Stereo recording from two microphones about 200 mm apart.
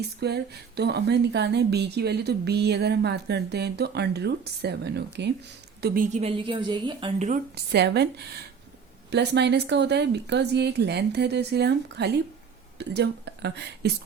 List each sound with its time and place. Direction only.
0.2 s speech: 55° right (ahead or behind)
5.8 s a woman's voice: 45° right (ahead or behind)
6.4 s a woman's voice: 25° right (ahead or behind)
7.5 s speech: 55° right (ahead or behind)